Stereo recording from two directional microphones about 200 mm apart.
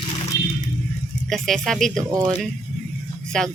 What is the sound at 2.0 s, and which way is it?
Speech, 15° right (ahead or behind).